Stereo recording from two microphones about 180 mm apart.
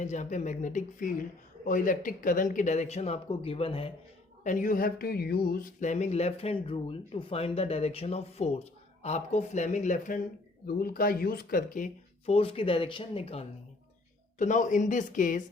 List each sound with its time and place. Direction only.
0.0 s speech: 45° left (ahead or behind)
4.4 s speech: 45° left (ahead or behind)
10.7 s speech: 55° left (ahead or behind)
12.2 s speech: 30° left (ahead or behind)
14.3 s speech: 45° left (ahead or behind)